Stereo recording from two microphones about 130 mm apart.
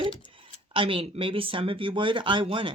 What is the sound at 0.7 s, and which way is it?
Speech, 45° right (ahead or behind).